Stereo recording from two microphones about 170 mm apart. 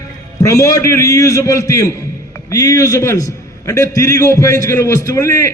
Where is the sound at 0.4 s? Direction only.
15° left (ahead or behind).